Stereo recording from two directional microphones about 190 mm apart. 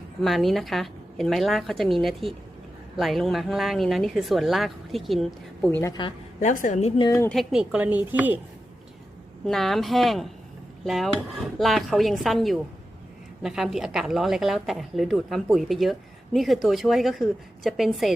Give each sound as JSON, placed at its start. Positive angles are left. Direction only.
{"t": 0.2, "sound": "a woman's voice", "side_deg": 0}
{"t": 6.4, "sound": "a woman's voice", "side_deg": 40}
{"t": 7.0, "sound": "speech", "side_deg": 20}
{"t": 7.3, "sound": "speech", "side_deg": 0}
{"t": 9.5, "sound": "a woman's voice", "side_deg": 0}